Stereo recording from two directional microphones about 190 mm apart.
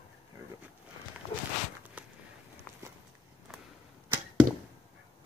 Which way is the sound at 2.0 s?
10° right (ahead or behind).